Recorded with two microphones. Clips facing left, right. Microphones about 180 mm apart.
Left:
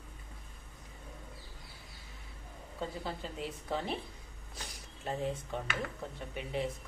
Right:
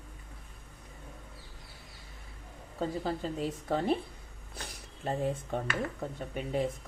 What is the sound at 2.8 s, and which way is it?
A woman's voice, 40° right (ahead or behind).